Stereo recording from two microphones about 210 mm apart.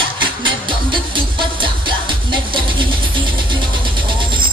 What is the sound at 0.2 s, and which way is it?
Music, 25° right (ahead or behind).